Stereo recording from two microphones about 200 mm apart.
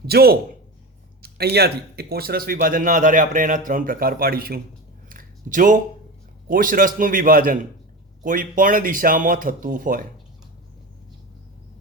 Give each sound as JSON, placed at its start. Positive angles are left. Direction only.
{"t": 0.0, "sound": "a man's voice", "side_deg": -50}
{"t": 5.0, "sound": "a sound", "side_deg": -40}
{"t": 6.5, "sound": "speech", "side_deg": -45}